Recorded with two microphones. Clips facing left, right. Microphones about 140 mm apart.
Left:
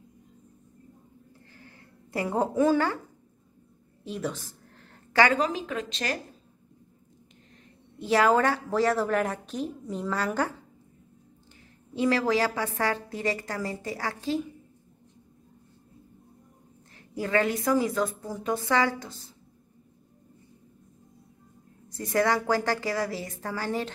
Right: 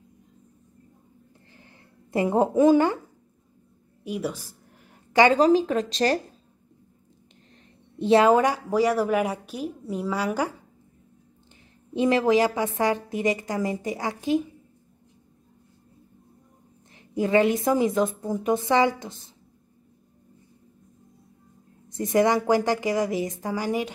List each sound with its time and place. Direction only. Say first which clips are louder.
1.5 s a sound: left 1 dB; 20° right (ahead or behind)
4.0 s a sound: right 3 dB; 10° right (ahead or behind)
5.3 s a woman's voice: right 9 dB; 35° right (ahead or behind)
8.0 s a woman's voice: right 4 dB; 20° right (ahead or behind)
11.9 s a woman's voice: right 4 dB; 20° right (ahead or behind)
17.1 s a woman's voice: right 5 dB; 20° right (ahead or behind)
21.8 s a woman's voice: right 4 dB; 20° right (ahead or behind)